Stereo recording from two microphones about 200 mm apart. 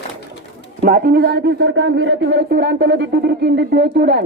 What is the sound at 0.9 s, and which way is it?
A woman's voice, 50° right (ahead or behind).